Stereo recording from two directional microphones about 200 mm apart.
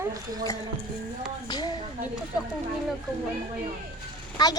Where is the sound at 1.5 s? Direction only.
20° left (ahead or behind).